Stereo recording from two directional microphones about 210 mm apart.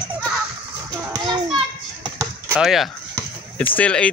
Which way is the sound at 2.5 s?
Centre (ahead or behind).